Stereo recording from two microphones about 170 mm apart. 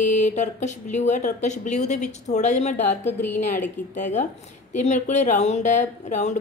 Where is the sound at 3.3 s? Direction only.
50° left (ahead or behind).